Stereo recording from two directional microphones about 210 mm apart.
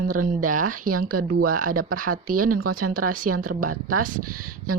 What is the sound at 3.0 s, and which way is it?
Speech, 90° right.